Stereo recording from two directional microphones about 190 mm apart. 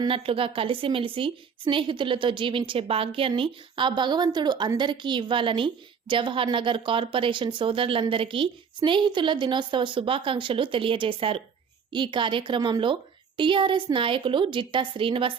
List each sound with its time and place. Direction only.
0.0 s a woman's voice: 30° right (ahead or behind)